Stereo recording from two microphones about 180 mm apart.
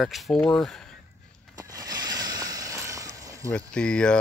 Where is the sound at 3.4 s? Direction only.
5° left (ahead or behind).